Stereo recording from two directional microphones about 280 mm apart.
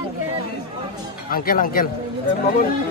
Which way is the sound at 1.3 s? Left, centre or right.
Left.